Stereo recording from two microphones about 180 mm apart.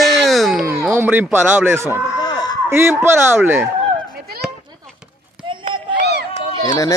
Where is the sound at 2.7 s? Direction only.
15° right (ahead or behind).